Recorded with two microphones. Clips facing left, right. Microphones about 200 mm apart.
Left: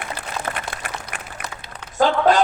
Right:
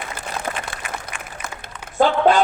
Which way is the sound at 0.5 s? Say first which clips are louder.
Right 1 dB; 10° right (ahead or behind).